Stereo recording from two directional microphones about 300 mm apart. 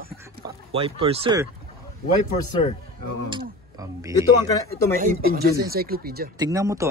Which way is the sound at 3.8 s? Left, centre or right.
Centre.